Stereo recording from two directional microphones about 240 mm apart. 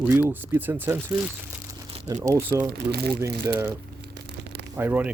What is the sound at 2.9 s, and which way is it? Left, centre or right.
Speech, right.